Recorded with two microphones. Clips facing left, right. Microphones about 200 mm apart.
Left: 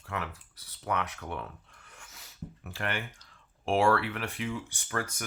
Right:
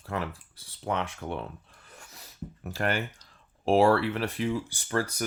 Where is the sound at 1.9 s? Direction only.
35° right (ahead or behind).